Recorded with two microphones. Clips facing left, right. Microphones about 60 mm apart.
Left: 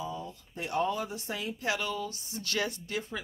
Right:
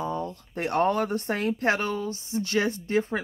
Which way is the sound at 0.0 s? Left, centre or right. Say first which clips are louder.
Right 8 dB; right.